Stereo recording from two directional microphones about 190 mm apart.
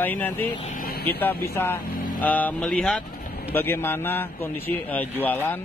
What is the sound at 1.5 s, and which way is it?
Speech, 10° left (ahead or behind).